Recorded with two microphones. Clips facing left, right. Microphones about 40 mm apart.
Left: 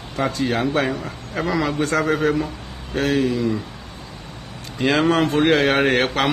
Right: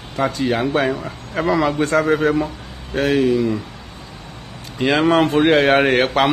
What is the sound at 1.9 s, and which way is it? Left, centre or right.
Mantra, right.